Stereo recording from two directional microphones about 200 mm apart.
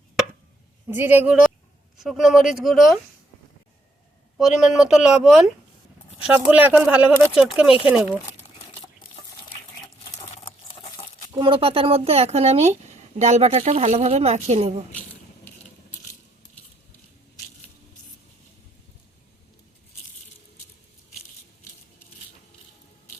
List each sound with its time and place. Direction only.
0.9 s speech: 10° right (ahead or behind)
4.4 s speech: centre (ahead or behind)
11.3 s speech: 25° right (ahead or behind)